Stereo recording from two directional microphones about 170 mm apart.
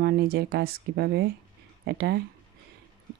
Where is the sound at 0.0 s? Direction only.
65° right (ahead or behind).